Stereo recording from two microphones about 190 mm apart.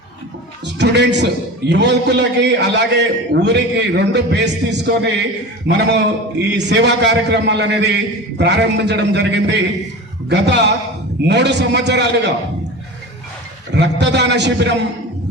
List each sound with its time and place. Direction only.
0.6 s a man's voice: 65° right (ahead or behind)
13.7 s a man's voice: 65° right (ahead or behind)